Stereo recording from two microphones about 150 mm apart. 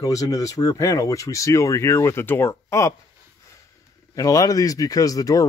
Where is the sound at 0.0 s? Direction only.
20° left (ahead or behind).